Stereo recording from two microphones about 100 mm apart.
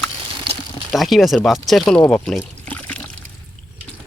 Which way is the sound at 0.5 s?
55° right (ahead or behind).